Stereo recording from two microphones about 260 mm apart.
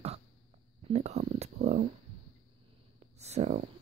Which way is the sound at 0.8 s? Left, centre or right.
Right.